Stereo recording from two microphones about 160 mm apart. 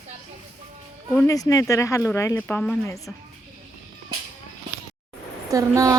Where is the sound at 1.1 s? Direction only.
15° left (ahead or behind).